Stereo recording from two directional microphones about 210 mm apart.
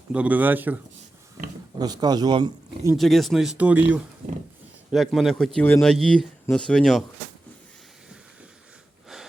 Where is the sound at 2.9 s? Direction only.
Centre (ahead or behind).